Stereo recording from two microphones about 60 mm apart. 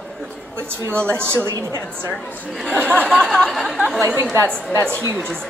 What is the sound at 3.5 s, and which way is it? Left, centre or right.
Speech, centre.